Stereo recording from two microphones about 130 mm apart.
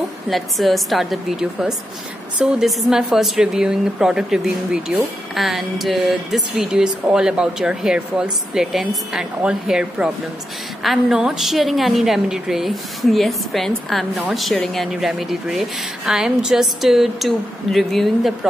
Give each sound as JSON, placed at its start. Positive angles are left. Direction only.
{"t": 0.3, "sound": "a woman's voice", "side_deg": 0}